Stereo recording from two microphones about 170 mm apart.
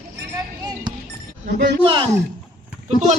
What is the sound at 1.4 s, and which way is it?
Speech, 60° right (ahead or behind).